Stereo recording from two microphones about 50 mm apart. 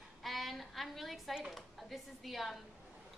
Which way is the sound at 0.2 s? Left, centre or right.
Centre.